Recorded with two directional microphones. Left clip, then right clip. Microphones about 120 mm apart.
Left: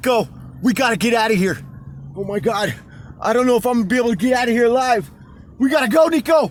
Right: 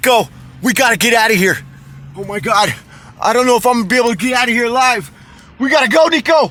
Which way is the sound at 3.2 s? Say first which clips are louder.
Right 5 dB; 25° right (ahead or behind).